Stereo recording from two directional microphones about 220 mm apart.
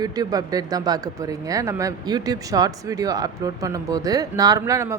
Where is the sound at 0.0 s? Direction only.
15° right (ahead or behind).